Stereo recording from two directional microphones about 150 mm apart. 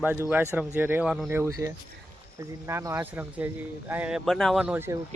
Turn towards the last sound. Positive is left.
turn(degrees=-10)  # may be behind; listen again after turning